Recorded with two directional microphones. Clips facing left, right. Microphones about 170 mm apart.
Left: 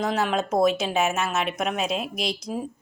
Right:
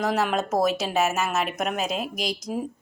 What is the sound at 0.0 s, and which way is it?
Speech, 5° right (ahead or behind).